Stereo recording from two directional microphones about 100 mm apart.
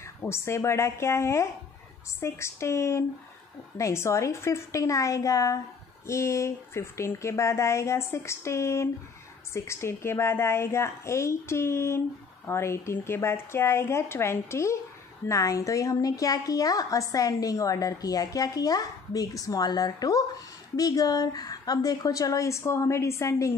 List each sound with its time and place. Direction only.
0.0 s a woman's voice: 25° left (ahead or behind)